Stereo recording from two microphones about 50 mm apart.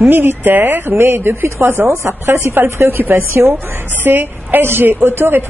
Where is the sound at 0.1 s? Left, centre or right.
Right.